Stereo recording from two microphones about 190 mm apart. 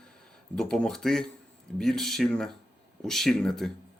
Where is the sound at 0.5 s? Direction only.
5° left (ahead or behind).